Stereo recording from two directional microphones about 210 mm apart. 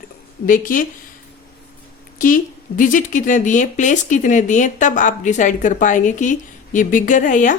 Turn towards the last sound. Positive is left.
turn(degrees=40)  # may be behind; listen again after turning